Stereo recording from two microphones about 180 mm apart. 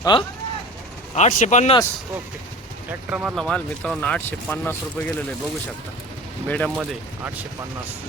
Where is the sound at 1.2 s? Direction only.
40° left (ahead or behind).